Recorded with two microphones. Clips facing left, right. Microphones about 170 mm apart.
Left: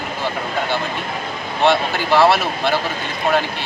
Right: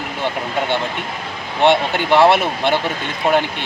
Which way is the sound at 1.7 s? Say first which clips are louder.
Right 2 dB; 25° right (ahead or behind).